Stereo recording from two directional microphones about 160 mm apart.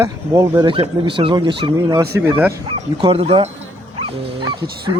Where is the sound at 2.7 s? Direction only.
35° right (ahead or behind).